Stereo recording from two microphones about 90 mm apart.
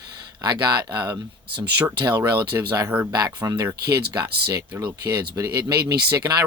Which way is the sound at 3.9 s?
50° right (ahead or behind).